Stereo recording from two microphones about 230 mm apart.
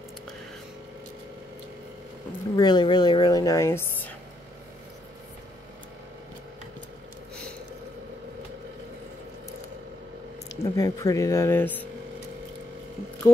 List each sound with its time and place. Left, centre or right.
2.5 s a woman's voice: centre
10.5 s a woman's voice: centre